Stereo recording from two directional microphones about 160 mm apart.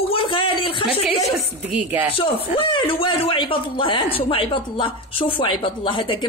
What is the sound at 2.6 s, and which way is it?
A woman's voice, 30° left (ahead or behind).